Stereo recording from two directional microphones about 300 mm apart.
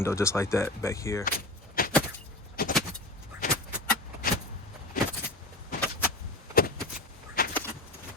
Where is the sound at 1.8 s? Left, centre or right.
Left.